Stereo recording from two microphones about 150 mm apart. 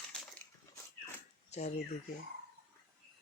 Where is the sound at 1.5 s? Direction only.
50° left (ahead or behind).